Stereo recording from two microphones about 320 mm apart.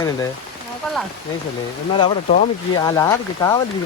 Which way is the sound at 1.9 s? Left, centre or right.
Centre.